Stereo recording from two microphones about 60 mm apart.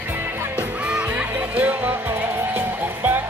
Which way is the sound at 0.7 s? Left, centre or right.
Right.